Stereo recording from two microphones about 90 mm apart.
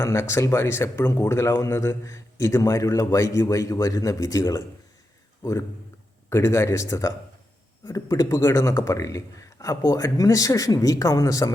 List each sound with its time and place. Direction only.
0.0 s speech: 30° left (ahead or behind)